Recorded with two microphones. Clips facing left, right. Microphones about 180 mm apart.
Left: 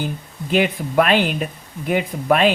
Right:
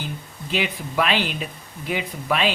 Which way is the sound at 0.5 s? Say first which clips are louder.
Left 7 dB; 50° left (ahead or behind).